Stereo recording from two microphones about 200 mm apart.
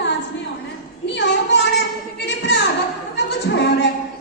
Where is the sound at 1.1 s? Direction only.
60° left (ahead or behind).